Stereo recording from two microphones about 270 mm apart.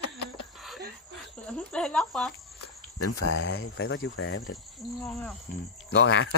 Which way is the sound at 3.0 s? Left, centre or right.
Left.